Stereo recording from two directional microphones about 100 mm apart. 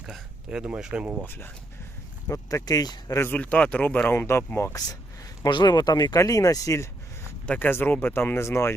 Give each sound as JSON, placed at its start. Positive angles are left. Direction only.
{"t": 0.0, "sound": "speech", "side_deg": -5}
{"t": 1.2, "sound": "speech", "side_deg": 20}
{"t": 3.2, "sound": "speech", "side_deg": 20}
{"t": 4.7, "sound": "speech", "side_deg": 40}
{"t": 7.4, "sound": "speech", "side_deg": 15}